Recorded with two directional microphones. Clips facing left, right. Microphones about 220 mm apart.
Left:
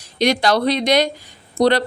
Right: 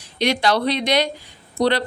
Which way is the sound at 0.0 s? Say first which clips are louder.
Left 3 dB; 40° left (ahead or behind).